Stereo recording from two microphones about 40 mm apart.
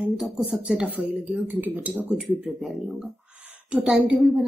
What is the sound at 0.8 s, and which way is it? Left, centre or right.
Speech, right.